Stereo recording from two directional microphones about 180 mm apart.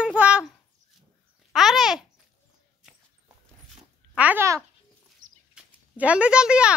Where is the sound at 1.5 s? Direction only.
Centre (ahead or behind).